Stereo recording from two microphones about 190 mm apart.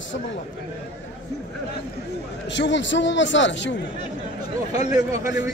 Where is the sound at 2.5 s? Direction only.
70° left (ahead or behind).